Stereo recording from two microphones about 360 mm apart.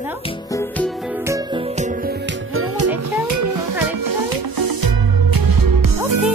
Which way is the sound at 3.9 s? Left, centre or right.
Right.